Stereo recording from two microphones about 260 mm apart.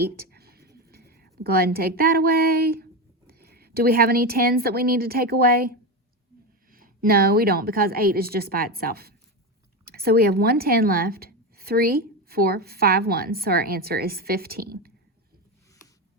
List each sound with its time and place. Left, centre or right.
0.0 s writing: right
0.9 s a woman's voice: right